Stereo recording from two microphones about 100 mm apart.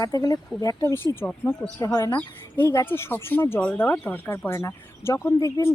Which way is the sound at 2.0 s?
20° left (ahead or behind).